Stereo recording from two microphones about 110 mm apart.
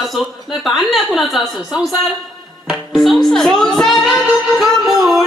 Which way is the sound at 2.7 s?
5° right (ahead or behind).